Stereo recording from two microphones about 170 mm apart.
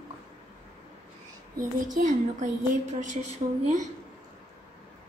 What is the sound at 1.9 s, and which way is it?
A woman's voice, 45° right (ahead or behind).